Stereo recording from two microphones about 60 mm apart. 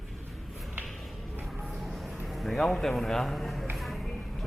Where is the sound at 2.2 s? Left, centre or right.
Centre.